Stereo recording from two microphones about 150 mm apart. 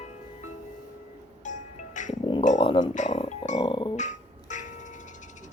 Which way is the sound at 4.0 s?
55° left (ahead or behind).